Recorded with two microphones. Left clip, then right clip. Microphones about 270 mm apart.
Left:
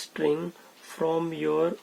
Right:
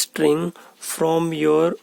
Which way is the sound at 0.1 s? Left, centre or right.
Right.